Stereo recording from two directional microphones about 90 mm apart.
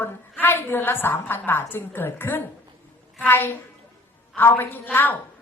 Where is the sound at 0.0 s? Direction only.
25° left (ahead or behind).